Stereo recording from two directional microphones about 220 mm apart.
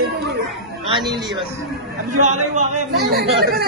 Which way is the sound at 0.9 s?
20° right (ahead or behind).